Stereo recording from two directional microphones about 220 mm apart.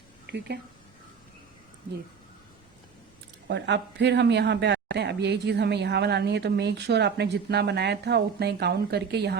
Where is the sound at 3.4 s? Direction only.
50° right (ahead or behind).